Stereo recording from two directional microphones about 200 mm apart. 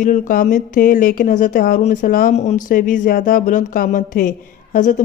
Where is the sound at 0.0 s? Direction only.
40° left (ahead or behind).